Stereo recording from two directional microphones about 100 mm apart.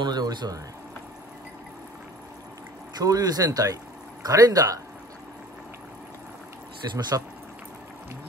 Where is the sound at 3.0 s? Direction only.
40° right (ahead or behind).